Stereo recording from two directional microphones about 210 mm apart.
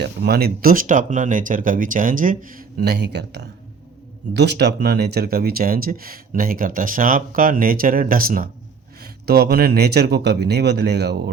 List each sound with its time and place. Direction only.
0.0 s speech: 50° right (ahead or behind)